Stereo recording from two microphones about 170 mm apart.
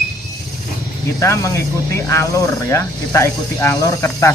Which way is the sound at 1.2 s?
15° left (ahead or behind).